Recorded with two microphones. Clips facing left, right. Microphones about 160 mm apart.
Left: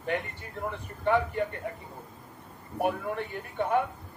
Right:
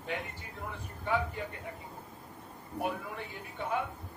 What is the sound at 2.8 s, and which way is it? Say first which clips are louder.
A woman's voice: left 7 dB; 60° left (ahead or behind).